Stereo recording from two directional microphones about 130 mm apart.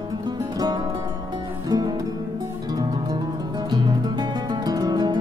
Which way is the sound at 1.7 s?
35° right (ahead or behind).